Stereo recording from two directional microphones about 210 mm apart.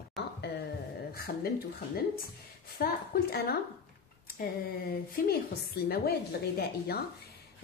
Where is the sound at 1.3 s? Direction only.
45° left (ahead or behind).